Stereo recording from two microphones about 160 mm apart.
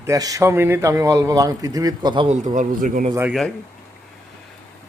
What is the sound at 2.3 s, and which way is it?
Speech, 50° right (ahead or behind).